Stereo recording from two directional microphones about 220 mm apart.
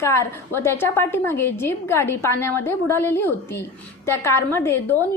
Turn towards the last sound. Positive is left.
turn(degrees=10)  # may be behind; listen again after turning